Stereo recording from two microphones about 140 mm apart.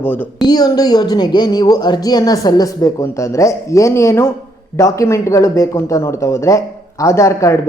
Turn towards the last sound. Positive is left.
turn(degrees=20)  # may be behind; listen again after turning